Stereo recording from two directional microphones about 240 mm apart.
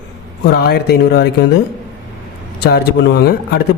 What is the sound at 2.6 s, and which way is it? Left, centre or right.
A woman's voice, left.